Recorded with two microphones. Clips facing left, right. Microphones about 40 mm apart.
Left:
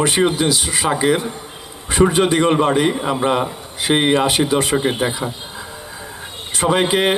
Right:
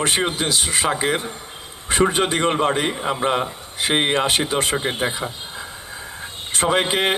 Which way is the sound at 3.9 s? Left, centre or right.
Right.